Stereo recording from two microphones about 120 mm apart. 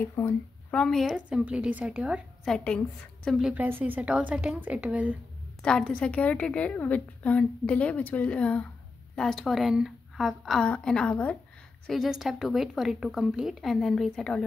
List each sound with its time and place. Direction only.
0.0 s speech: 25° left (ahead or behind)
0.7 s a woman's voice: 5° left (ahead or behind)
1.1 s a woman's voice: 10° right (ahead or behind)
2.5 s a woman's voice: 10° left (ahead or behind)
3.3 s a woman's voice: 5° right (ahead or behind)
3.5 s a woman's voice: 15° right (ahead or behind)
5.6 s a woman's voice: 5° left (ahead or behind)
11.8 s a woman's voice: centre (ahead or behind)